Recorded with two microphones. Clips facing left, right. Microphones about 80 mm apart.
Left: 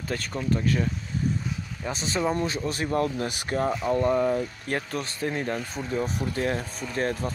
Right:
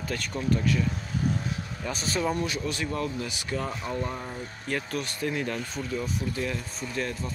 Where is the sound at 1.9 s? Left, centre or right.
Left.